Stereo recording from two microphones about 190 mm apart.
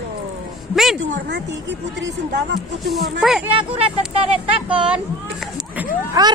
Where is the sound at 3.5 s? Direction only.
30° right (ahead or behind).